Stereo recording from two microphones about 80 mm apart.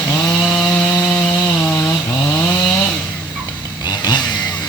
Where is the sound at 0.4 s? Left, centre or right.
Centre.